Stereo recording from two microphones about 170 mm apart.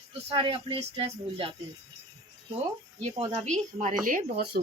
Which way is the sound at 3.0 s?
40° right (ahead or behind).